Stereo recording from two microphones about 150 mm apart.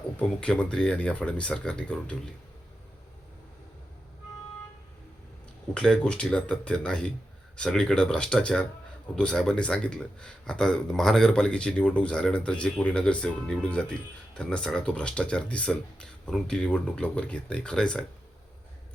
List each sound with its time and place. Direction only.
0.2 s speech: 5° left (ahead or behind)
5.7 s speech: 5° left (ahead or behind)